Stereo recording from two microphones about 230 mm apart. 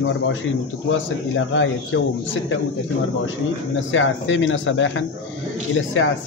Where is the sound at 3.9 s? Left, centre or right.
Left.